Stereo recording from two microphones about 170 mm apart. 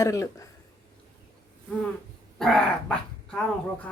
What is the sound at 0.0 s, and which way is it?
Speech, 20° left (ahead or behind).